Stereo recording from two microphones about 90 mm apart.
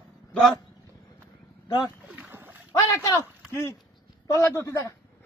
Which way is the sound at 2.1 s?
20° right (ahead or behind).